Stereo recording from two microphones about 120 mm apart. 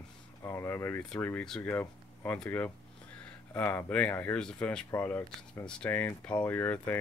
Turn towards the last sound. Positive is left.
turn(degrees=15)  # may be behind; listen again after turning